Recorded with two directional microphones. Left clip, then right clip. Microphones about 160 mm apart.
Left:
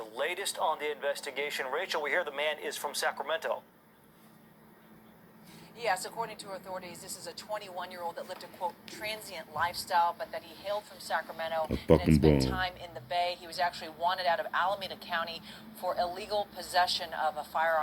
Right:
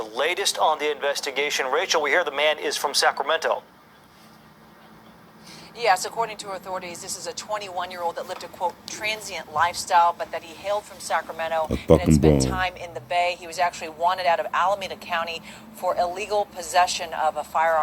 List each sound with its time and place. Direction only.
0.0 s speech: 55° right (ahead or behind)
5.7 s speech: 55° right (ahead or behind); by 17.7 s 40° right (ahead or behind)